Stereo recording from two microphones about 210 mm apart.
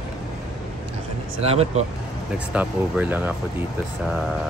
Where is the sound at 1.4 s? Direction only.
30° right (ahead or behind).